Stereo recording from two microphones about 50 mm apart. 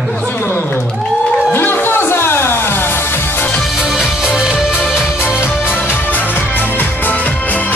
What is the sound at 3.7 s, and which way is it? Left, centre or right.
Music, centre.